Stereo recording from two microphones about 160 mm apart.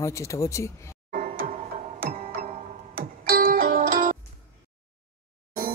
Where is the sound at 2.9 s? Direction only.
65° right (ahead or behind).